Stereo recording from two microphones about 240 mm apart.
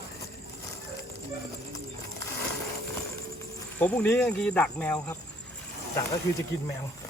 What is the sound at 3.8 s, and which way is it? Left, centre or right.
Speech, centre.